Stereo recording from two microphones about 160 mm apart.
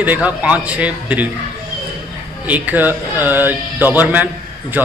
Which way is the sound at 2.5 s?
10° right (ahead or behind).